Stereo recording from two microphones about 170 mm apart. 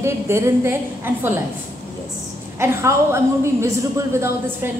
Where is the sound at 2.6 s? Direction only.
15° right (ahead or behind).